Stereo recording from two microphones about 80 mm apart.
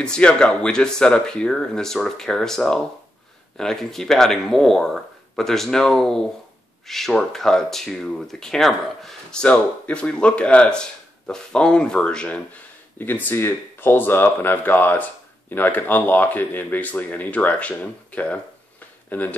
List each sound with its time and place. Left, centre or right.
0.0 s speech: centre
13.0 s speech: left